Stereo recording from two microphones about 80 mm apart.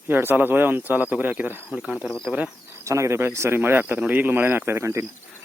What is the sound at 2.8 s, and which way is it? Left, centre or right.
Speech, right.